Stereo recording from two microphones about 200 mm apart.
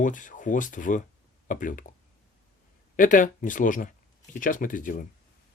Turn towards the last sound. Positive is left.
turn(degrees=40)  # may be behind; listen again after turning